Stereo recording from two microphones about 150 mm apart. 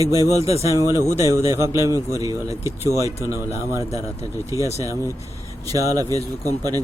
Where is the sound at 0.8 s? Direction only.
20° right (ahead or behind).